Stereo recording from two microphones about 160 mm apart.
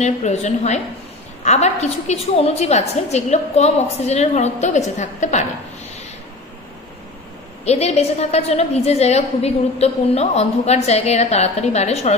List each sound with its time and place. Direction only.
0.0 s a woman's voice: 45° left (ahead or behind)
7.6 s a woman's voice: 40° left (ahead or behind)